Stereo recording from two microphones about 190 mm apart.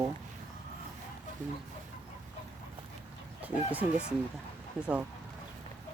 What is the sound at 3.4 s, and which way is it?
Speech, 10° right (ahead or behind).